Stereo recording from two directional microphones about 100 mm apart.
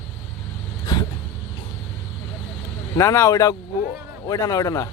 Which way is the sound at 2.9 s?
30° left (ahead or behind).